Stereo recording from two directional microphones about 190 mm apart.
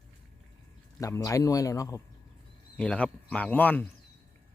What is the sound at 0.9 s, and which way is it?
Speech, 15° left (ahead or behind).